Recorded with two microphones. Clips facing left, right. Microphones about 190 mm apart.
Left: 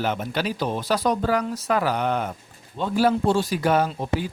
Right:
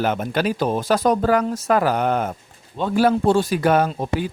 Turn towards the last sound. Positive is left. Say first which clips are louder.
# right 3 dB
turn(degrees=-55)  # may be behind; listen again after turning